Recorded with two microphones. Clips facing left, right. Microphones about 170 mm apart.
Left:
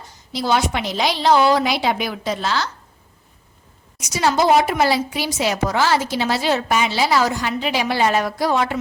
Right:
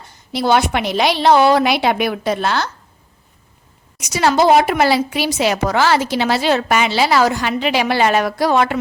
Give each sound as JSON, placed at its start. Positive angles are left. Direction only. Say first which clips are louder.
{"t": 0.1, "sound": "a woman's voice", "louder": "right 4 dB", "side_deg": -60}
{"t": 4.0, "sound": "a woman's voice", "louder": "right 4 dB", "side_deg": -70}